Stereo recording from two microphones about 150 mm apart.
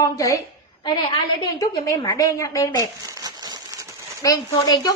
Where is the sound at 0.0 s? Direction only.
25° left (ahead or behind).